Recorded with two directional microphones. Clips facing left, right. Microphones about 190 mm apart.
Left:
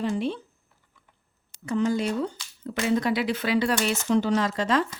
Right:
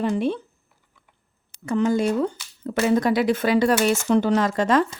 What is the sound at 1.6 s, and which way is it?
A woman's voice, 55° right (ahead or behind).